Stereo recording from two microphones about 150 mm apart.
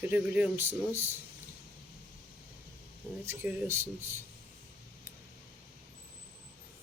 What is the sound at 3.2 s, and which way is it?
Speech, 15° right (ahead or behind).